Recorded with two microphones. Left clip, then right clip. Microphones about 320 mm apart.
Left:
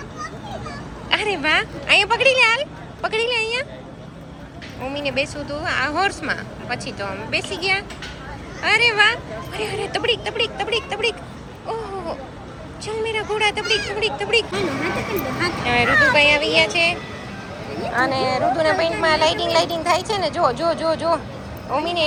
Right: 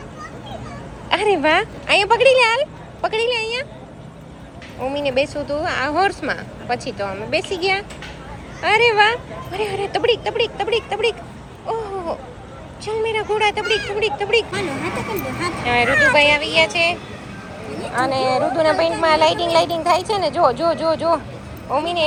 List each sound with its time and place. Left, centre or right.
1.1 s speech: centre
4.8 s speech: centre
11.6 s a sound: centre
12.8 s speech: centre
15.6 s a woman's voice: centre
15.9 s speech: left
16.1 s a woman's voice: centre